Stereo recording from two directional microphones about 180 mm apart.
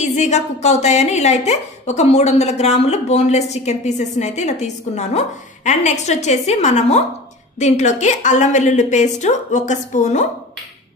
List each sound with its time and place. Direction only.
0.0 s a woman's voice: 40° left (ahead or behind)